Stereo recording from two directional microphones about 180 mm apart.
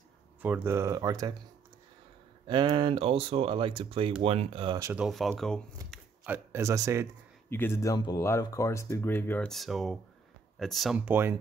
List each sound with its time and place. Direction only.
0.4 s speech: 10° right (ahead or behind)
2.4 s speech: 25° right (ahead or behind)
4.9 s speech: centre (ahead or behind)
5.9 s a sound: centre (ahead or behind)
6.2 s speech: 10° right (ahead or behind)
7.4 s speech: 10° left (ahead or behind)
11.0 s speech: 10° right (ahead or behind)